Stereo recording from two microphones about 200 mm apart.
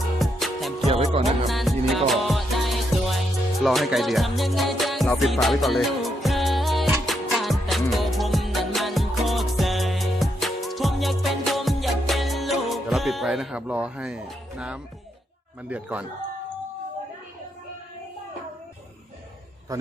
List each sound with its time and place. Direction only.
0.2 s music: centre (ahead or behind)
0.9 s music: 30° right (ahead or behind)
1.2 s music: centre (ahead or behind)
15.7 s a man's voice: 5° right (ahead or behind)
19.7 s a sound: 15° right (ahead or behind)